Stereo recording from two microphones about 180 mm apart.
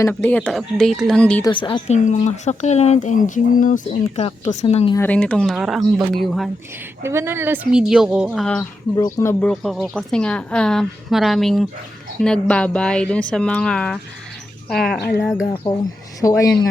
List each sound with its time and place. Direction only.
0.0 s speech: 10° left (ahead or behind)
1.5 s speech: 25° left (ahead or behind)
2.0 s speech: 40° left (ahead or behind)
4.9 s a woman's voice: 10° left (ahead or behind)
7.0 s a woman's voice: 15° right (ahead or behind); by 8.6 s 5° left (ahead or behind)
9.0 s speech: 20° left (ahead or behind)
9.5 s a woman's voice: centre (ahead or behind)
15.6 s speech: 30° left (ahead or behind)
16.4 s speech: 15° left (ahead or behind)